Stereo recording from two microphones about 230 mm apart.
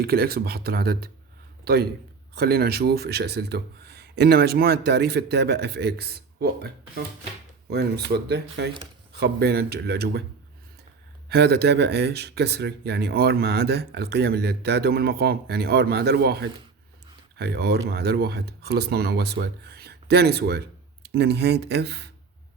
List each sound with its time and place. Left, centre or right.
0.0 s a man's voice: right
11.3 s speech: right